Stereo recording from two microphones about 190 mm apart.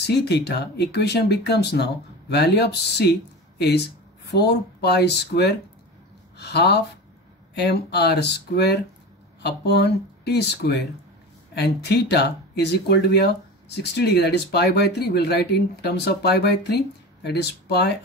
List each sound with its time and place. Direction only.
0.0 s speech: 60° left (ahead or behind)